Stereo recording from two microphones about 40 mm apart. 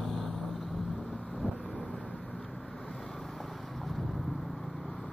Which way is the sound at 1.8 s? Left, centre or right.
Centre.